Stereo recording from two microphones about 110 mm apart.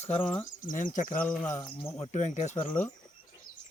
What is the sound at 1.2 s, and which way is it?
Speech, 5° left (ahead or behind).